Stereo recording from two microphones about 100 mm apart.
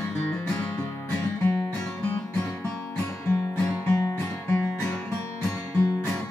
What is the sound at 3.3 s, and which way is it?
Music, 30° left (ahead or behind).